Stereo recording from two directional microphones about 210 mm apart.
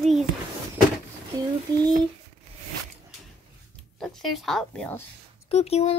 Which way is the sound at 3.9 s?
Centre (ahead or behind).